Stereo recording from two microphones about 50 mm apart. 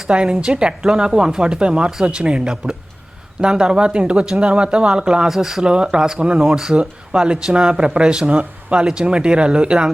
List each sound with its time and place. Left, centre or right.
0.1 s speech: centre